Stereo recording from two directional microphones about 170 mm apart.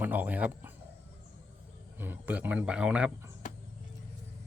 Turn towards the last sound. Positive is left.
turn(degrees=50)  # may be behind; listen again after turning